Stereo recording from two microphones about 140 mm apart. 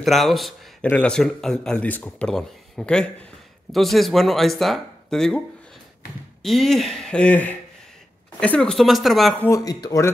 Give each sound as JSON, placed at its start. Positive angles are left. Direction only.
{"t": 0.0, "sound": "speech", "side_deg": 0}
{"t": 6.4, "sound": "speech", "side_deg": 0}
{"t": 9.4, "sound": "speech", "side_deg": 25}